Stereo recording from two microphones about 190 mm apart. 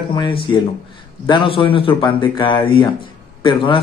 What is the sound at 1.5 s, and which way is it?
Speech, 30° left (ahead or behind).